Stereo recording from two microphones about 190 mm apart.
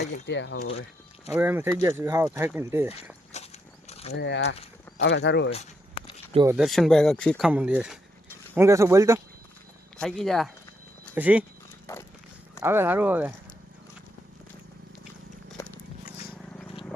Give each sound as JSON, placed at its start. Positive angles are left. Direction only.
{"t": 0.0, "sound": "speech", "side_deg": 70}
{"t": 0.7, "sound": "a sound", "side_deg": 30}
{"t": 1.4, "sound": "speech", "side_deg": -10}
{"t": 3.3, "sound": "a sound", "side_deg": 35}
{"t": 4.2, "sound": "speech", "side_deg": 65}
{"t": 6.5, "sound": "speech", "side_deg": 0}
{"t": 10.0, "sound": "speech", "side_deg": 5}
{"t": 11.9, "sound": "a sound", "side_deg": 15}
{"t": 12.5, "sound": "speech", "side_deg": -10}